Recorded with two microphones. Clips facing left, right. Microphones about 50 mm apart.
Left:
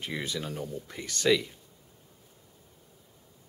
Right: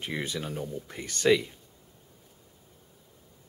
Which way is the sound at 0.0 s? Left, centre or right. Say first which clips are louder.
Right 1 dB; centre.